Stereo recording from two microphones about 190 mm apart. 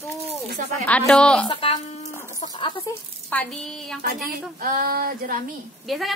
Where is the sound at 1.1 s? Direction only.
5° left (ahead or behind).